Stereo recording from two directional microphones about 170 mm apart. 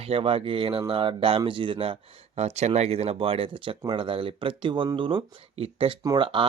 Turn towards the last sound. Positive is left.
turn(degrees=-30)  # may be behind; listen again after turning